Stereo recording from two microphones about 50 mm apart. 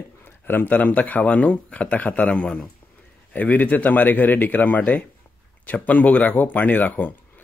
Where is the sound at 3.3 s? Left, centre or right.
Left.